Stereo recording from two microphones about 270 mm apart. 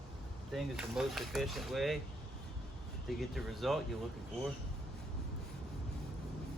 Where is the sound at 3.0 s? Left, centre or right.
Centre.